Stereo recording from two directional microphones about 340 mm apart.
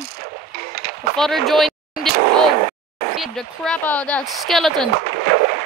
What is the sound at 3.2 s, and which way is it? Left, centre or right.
Speech, centre.